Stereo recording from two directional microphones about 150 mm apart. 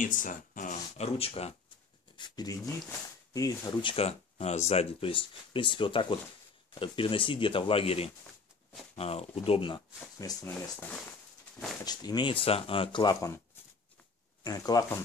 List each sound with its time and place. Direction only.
0.0 s speech: 60° left (ahead or behind); by 1.5 s 40° left (ahead or behind)
2.1 s speech: 30° left (ahead or behind)
3.9 s speech: 45° left (ahead or behind)
10.2 s speech: 25° left (ahead or behind)
11.8 s speech: 25° left (ahead or behind)
14.4 s speech: 25° left (ahead or behind)